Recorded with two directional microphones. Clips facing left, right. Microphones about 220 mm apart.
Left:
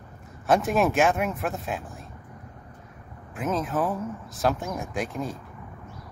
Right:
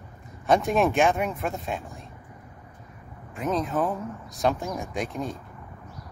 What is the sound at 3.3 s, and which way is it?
Speech, centre (ahead or behind).